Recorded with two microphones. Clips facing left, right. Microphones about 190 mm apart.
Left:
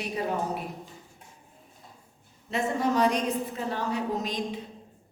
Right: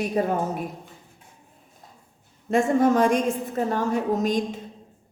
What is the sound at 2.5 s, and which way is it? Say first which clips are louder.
A man's voice: right 7 dB; 50° right (ahead or behind).